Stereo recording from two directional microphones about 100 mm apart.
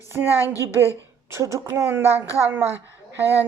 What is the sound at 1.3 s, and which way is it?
Speech, 30° right (ahead or behind).